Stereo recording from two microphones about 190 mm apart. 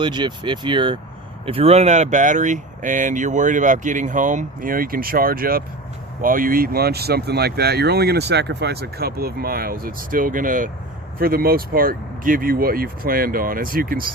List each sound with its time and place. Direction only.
0.0 s speech: 25° right (ahead or behind); by 14.1 s 50° right (ahead or behind)